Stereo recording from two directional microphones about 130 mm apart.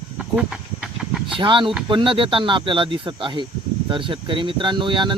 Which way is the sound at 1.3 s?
40° right (ahead or behind).